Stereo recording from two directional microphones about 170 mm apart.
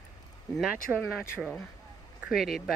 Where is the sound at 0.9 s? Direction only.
5° right (ahead or behind).